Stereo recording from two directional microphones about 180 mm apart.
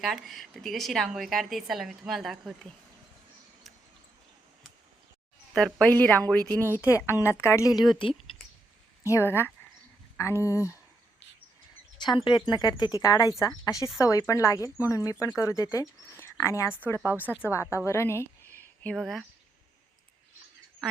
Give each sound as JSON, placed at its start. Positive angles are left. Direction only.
{"t": 0.0, "sound": "a woman's voice", "side_deg": 0}
{"t": 5.5, "sound": "speech", "side_deg": 0}
{"t": 9.0, "sound": "speech", "side_deg": 15}
{"t": 12.0, "sound": "speech", "side_deg": 25}
{"t": 17.0, "sound": "speech", "side_deg": -10}
{"t": 17.4, "sound": "a woman's voice", "side_deg": 15}